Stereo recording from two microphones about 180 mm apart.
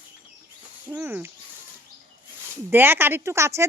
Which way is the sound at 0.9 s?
10° right (ahead or behind).